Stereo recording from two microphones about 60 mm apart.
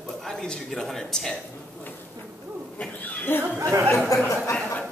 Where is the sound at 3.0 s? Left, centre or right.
Left.